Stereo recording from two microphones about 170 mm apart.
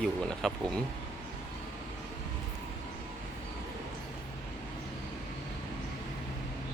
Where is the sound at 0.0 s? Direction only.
Centre (ahead or behind).